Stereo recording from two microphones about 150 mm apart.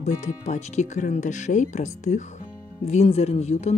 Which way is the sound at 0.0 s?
50° left (ahead or behind).